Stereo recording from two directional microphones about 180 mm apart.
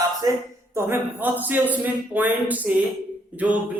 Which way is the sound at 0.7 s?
15° right (ahead or behind).